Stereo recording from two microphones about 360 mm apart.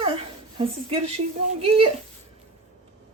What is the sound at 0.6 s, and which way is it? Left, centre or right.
Speech, centre.